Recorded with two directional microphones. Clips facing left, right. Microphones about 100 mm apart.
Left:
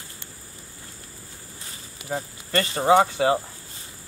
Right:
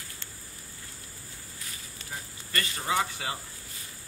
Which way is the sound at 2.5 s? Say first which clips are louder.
Left 9 dB; 30° left (ahead or behind).